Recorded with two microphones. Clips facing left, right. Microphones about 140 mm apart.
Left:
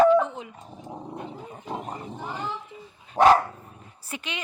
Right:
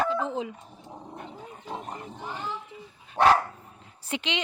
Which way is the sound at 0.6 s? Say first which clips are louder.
Left 6 dB; 20° left (ahead or behind).